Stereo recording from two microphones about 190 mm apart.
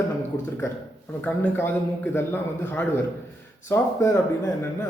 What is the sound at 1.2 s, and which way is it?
A man's voice, 10° left (ahead or behind).